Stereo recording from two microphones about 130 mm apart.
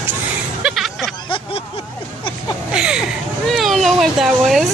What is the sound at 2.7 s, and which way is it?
Speech, 5° right (ahead or behind).